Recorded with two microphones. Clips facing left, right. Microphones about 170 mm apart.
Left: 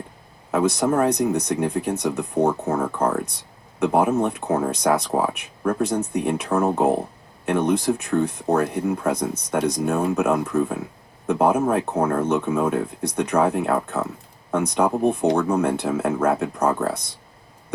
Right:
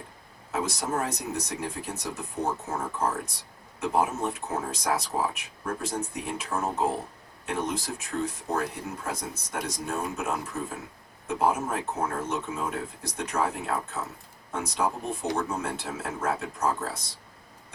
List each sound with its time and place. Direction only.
0.5 s speech: 60° left (ahead or behind)